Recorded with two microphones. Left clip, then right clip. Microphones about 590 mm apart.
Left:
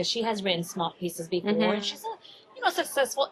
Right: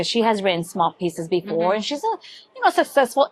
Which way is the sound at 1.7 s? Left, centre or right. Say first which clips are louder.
Right 10 dB; right.